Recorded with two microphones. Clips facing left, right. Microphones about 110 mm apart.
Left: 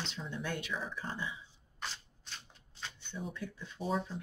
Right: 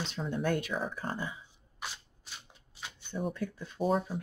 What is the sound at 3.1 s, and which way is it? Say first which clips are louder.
Speech: right 8 dB; 50° right (ahead or behind).